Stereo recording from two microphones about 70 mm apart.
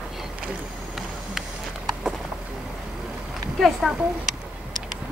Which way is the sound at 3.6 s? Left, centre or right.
Centre.